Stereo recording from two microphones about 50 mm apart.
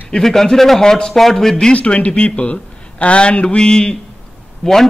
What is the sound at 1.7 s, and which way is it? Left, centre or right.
A man's voice, left.